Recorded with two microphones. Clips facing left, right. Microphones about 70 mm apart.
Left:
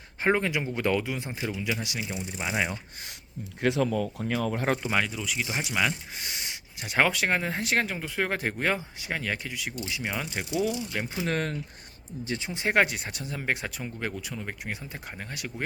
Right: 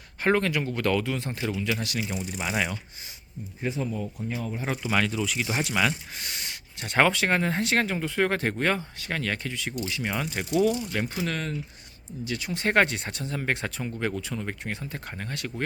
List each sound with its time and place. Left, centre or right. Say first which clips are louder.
0.2 s speech: right 1 dB; centre
2.0 s speech: right 2 dB; centre
3.6 s speech: left 5 dB; left
4.2 s speech: left 4 dB; left
4.6 s speech: left 4 dB; left
4.9 s speech: right 2 dB; centre
11.3 s speech: left 2 dB; left
12.2 s speech: right 2 dB; left
12.6 s speech: right 1 dB; centre